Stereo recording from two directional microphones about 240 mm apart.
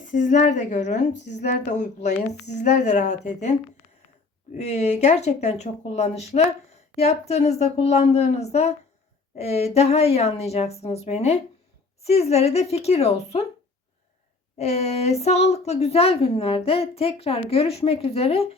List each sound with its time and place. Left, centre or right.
0.1 s a woman's voice: left
4.5 s a woman's voice: left
14.6 s a woman's voice: left